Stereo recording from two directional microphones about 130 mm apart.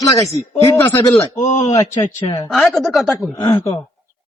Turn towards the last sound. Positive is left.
turn(degrees=25)  # may be behind; listen again after turning